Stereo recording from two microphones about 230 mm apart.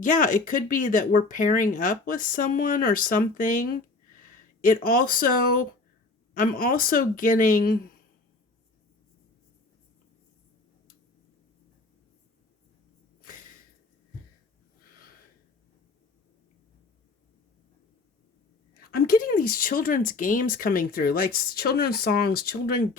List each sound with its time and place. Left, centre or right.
0.0 s speech: left
18.8 s speech: left